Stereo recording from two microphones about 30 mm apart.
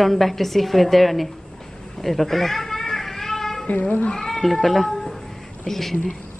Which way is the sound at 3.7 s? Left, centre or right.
Left.